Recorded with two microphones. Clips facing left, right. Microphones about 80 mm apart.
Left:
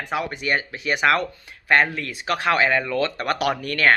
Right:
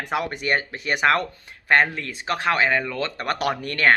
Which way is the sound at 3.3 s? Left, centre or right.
Right.